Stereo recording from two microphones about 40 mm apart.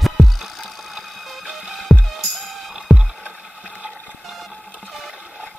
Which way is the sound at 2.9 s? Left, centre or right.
Centre.